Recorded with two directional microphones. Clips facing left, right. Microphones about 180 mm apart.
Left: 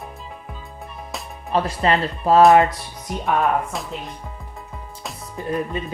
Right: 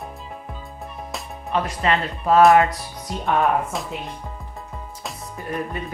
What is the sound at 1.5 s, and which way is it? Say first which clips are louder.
Speech: left 2 dB; 35° left (ahead or behind).